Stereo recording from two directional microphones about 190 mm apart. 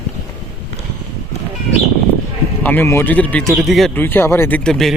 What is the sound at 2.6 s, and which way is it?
Speech, 10° left (ahead or behind).